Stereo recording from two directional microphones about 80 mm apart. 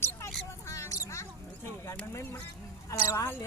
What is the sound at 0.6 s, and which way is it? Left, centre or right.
Rodents, left.